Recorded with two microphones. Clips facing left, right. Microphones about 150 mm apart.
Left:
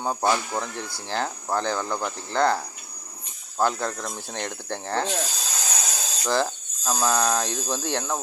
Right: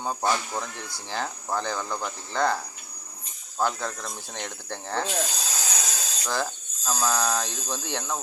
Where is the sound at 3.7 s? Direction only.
15° left (ahead or behind).